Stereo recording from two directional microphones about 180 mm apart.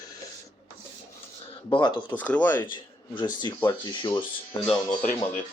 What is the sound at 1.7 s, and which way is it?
Speech, 25° left (ahead or behind).